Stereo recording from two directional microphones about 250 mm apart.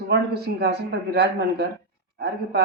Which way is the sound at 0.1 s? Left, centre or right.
Right.